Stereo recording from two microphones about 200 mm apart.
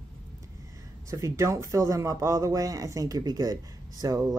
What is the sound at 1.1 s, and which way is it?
Speech, 15° right (ahead or behind).